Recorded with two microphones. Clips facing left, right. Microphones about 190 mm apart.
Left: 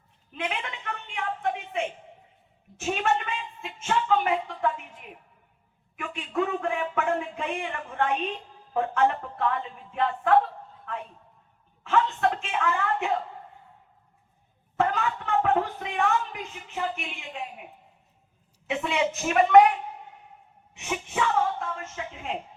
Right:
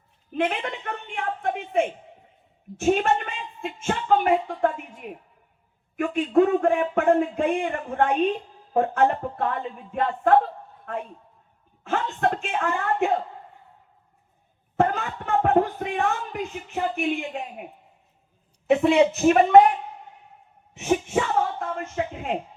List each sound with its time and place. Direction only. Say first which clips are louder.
0.3 s a woman's voice: right 7 dB; 50° right (ahead or behind)
11.8 s a woman's voice: even; 45° right (ahead or behind)
14.8 s a woman's voice: right 2 dB; 45° right (ahead or behind)
18.7 s a woman's voice: right 9 dB; 40° right (ahead or behind)
20.7 s speech: right 7 dB; 45° right (ahead or behind)